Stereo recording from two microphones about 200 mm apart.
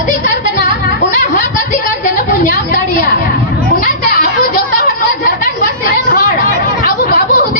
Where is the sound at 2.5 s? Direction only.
45° left (ahead or behind).